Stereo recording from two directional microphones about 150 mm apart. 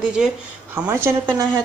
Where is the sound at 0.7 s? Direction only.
15° right (ahead or behind).